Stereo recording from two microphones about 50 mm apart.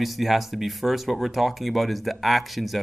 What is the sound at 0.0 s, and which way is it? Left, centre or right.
Speech, centre.